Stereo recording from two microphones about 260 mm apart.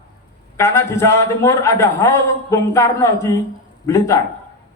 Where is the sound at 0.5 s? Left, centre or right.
Centre.